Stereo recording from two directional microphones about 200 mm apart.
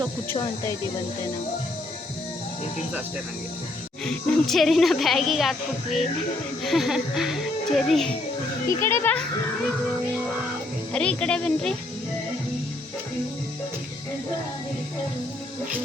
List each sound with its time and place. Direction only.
0.3 s speech: 15° left (ahead or behind)
4.0 s a woman's voice: 5° left (ahead or behind)
8.8 s speech: 10° left (ahead or behind)
10.9 s a woman's voice: 5° left (ahead or behind)